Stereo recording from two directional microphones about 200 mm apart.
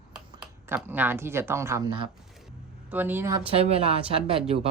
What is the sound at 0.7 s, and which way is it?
Speech, 10° right (ahead or behind).